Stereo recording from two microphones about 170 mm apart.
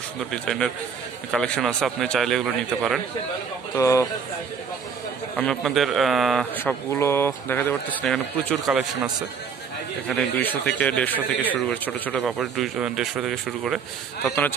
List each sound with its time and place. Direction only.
0.3 s speech: centre (ahead or behind)
3.7 s speech: 20° left (ahead or behind)
5.3 s speech: 5° left (ahead or behind)
6.5 s speech: 10° left (ahead or behind)
10.0 s speech: 10° left (ahead or behind)
14.2 s speech: 10° left (ahead or behind)